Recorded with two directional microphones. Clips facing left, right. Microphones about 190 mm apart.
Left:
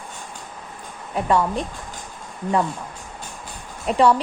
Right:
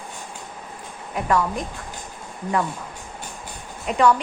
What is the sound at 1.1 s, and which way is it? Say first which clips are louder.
Speech: left 2 dB; 25° left (ahead or behind).